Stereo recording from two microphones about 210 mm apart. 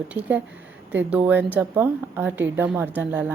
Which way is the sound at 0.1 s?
5° right (ahead or behind).